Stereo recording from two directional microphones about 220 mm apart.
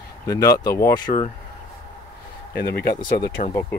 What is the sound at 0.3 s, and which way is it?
Speech, 15° left (ahead or behind).